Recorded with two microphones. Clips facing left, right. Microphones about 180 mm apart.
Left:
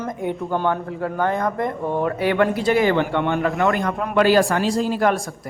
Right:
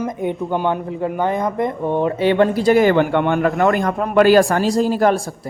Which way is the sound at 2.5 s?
40° right (ahead or behind).